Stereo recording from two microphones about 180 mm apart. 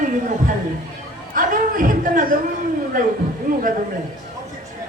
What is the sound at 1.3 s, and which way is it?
Speech, 50° right (ahead or behind).